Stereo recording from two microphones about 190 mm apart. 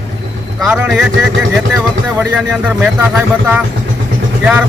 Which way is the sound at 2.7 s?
5° right (ahead or behind).